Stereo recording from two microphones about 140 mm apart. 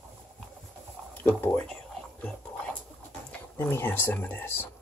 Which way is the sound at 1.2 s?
15° left (ahead or behind).